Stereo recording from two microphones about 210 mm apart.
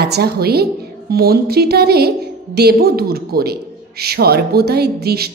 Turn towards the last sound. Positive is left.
turn(degrees=-50)  # may be behind; listen again after turning